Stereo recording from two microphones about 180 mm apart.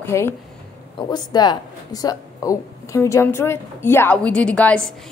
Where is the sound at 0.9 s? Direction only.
25° left (ahead or behind); by 4.9 s 5° left (ahead or behind).